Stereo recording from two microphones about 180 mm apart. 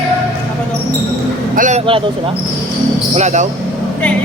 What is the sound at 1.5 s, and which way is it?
Speech, 45° right (ahead or behind).